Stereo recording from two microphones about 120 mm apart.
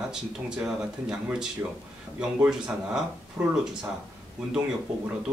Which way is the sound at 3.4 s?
20° right (ahead or behind).